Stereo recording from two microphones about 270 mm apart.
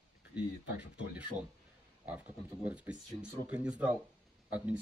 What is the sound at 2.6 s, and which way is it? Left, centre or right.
Speech, centre.